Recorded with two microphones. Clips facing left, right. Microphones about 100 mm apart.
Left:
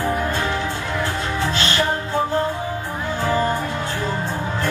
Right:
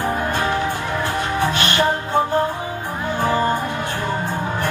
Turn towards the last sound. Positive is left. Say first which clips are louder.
# right 2 dB
turn(degrees=-20)  # may be behind; listen again after turning